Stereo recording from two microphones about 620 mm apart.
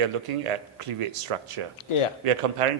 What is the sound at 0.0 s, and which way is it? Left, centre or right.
Speech, right.